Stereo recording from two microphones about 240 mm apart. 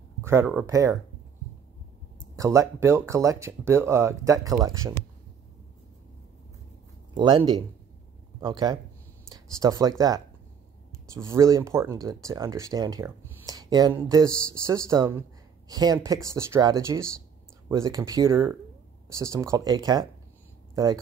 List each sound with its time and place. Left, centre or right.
0.2 s speech: centre
2.3 s speech: centre
7.2 s speech: centre
11.2 s speech: centre